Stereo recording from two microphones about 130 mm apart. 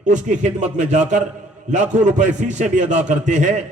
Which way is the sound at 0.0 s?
70° right (ahead or behind).